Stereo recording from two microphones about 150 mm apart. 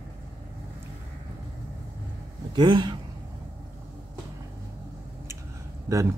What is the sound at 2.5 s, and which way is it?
Speech, 30° right (ahead or behind).